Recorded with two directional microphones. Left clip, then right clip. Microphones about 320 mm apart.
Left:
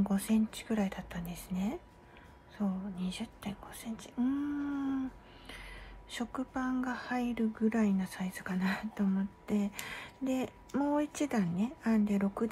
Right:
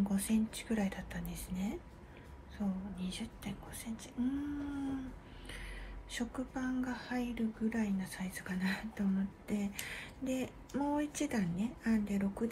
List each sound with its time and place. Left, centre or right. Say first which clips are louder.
0.1 s speech: left 3 dB; centre
6.1 s speech: left 3 dB; centre